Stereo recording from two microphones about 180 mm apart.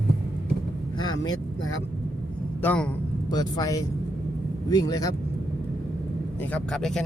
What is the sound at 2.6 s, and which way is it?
Speech, 10° left (ahead or behind).